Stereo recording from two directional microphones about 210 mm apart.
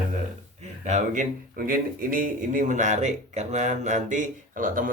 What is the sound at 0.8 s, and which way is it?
Speech, 35° right (ahead or behind).